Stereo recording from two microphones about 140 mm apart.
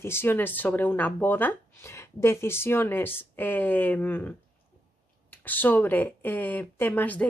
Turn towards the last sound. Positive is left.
turn(degrees=10)  # may be behind; listen again after turning